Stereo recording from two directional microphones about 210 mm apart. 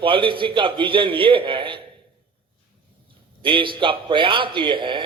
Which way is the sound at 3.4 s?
25° right (ahead or behind).